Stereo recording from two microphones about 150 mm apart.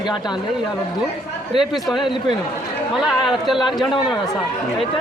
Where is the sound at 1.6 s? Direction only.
Centre (ahead or behind).